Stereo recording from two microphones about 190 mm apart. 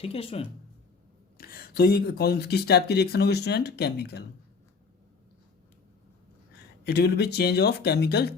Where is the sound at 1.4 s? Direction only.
50° left (ahead or behind).